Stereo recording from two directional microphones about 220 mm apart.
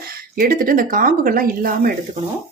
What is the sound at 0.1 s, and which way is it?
Speech, 40° right (ahead or behind).